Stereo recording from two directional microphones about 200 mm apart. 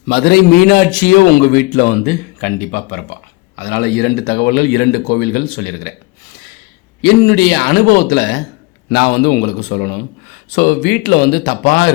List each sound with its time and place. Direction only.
0.1 s a man's voice: 50° left (ahead or behind)
7.0 s a man's voice: 50° left (ahead or behind)